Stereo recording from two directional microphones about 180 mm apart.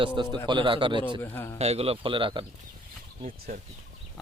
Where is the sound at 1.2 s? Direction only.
10° left (ahead or behind).